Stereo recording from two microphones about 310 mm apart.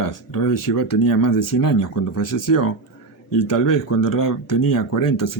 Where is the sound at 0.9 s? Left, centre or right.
Left.